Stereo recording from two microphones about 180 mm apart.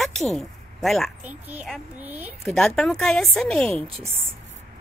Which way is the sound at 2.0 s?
10° right (ahead or behind).